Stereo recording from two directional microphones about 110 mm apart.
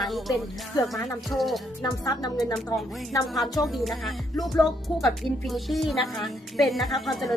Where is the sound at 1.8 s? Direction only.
30° left (ahead or behind).